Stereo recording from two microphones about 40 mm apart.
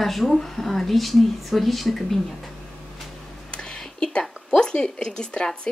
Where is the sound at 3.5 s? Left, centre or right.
Left.